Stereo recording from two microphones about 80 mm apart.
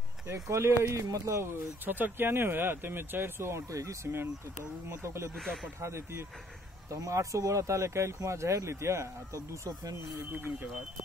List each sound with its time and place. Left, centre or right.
0.3 s speech: right
5.3 s speech: centre
5.8 s speech: right